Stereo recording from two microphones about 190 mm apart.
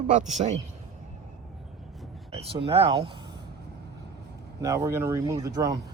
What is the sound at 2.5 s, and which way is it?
Speech, 30° right (ahead or behind).